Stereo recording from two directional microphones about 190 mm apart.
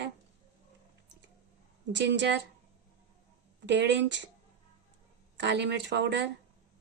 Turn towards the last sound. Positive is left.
turn(degrees=-65)  # may be behind; listen again after turning